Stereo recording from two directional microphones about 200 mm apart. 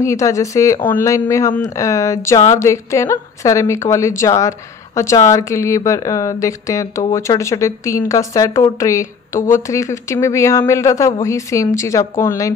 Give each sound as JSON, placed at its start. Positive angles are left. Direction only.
{"t": 0.0, "sound": "a woman's voice", "side_deg": 15}